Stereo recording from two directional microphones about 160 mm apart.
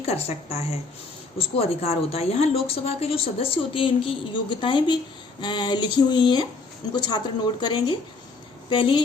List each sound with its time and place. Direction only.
0.1 s a woman's voice: 40° left (ahead or behind)